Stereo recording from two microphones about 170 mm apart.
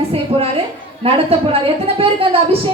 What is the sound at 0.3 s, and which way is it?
A woman's voice, 35° right (ahead or behind).